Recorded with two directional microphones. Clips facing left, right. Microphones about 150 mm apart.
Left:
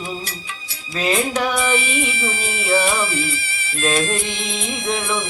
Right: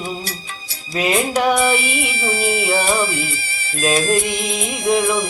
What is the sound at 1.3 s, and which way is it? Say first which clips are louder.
Music: right 4 dB; 35° right (ahead or behind).